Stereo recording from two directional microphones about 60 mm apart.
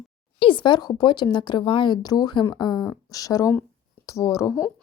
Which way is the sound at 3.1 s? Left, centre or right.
Left.